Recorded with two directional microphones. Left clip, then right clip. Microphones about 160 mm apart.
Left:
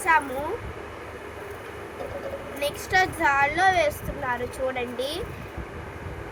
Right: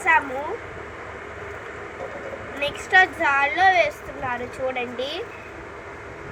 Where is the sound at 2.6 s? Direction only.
10° left (ahead or behind).